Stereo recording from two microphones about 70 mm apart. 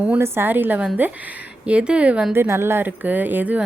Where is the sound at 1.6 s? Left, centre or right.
Centre.